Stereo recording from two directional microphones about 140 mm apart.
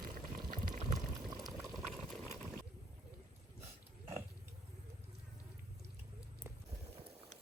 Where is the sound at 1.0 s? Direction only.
25° right (ahead or behind).